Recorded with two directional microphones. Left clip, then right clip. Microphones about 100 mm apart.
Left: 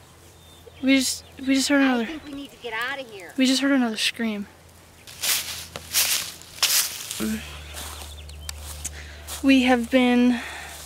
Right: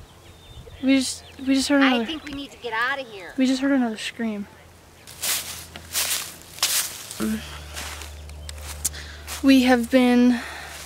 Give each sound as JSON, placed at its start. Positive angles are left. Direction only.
{"t": 0.8, "sound": "speech", "side_deg": 10}
{"t": 2.6, "sound": "speech", "side_deg": -10}
{"t": 3.3, "sound": "speech", "side_deg": 20}
{"t": 5.2, "sound": "walk", "side_deg": 0}
{"t": 8.8, "sound": "a sound", "side_deg": -15}
{"t": 9.4, "sound": "speech", "side_deg": -15}